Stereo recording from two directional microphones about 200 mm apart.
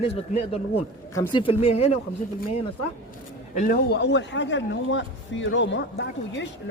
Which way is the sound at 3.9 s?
60° left (ahead or behind).